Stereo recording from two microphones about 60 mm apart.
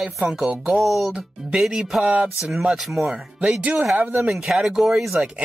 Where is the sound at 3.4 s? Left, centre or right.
Right.